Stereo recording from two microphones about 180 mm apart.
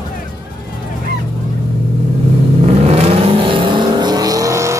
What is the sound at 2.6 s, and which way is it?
Vehicle, 35° right (ahead or behind).